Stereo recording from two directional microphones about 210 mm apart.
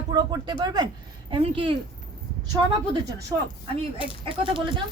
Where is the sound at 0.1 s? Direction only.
20° right (ahead or behind).